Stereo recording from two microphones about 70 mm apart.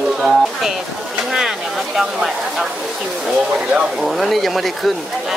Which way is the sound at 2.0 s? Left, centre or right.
Centre.